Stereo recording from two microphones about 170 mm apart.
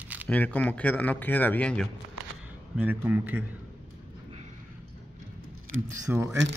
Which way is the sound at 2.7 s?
10° right (ahead or behind).